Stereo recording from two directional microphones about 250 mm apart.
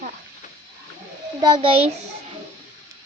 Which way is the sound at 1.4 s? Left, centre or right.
Centre.